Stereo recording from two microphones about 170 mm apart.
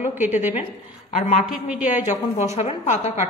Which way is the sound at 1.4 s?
5° right (ahead or behind).